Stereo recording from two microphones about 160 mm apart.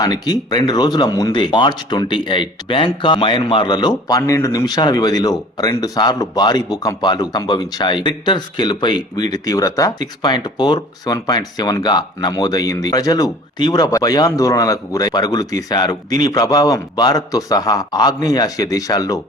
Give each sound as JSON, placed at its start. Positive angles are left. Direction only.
{"t": 0.0, "sound": "speech", "side_deg": 25}